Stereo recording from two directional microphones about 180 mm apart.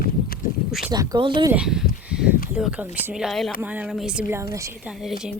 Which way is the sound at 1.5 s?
5° right (ahead or behind).